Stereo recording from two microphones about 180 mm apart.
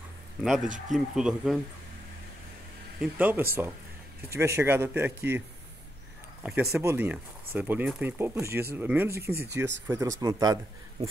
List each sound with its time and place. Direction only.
0.4 s speech: centre (ahead or behind)
3.0 s speech: 10° right (ahead or behind)
6.4 s speech: 10° right (ahead or behind)